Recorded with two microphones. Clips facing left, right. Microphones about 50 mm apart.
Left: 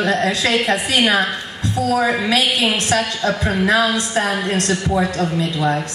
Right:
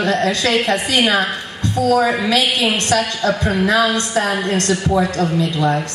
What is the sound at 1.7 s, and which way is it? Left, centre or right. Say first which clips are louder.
Speech: right 3 dB; right.